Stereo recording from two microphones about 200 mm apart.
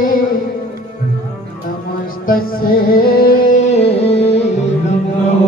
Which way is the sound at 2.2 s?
45° left (ahead or behind).